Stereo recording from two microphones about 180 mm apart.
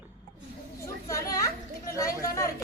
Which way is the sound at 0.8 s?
15° left (ahead or behind).